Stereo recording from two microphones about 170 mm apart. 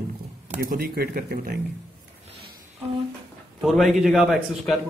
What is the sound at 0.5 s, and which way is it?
Speech, 55° right (ahead or behind).